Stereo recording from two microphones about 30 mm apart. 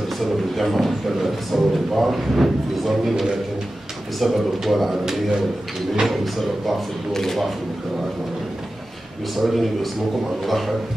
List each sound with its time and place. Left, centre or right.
0.2 s a man's voice: centre
6.0 s a man's voice: centre
7.1 s a man's voice: centre
9.3 s a man's voice: centre